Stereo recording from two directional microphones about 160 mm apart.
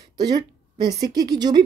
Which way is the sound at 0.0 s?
25° right (ahead or behind).